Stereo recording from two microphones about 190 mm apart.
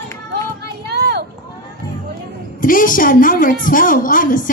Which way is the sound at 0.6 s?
60° right (ahead or behind).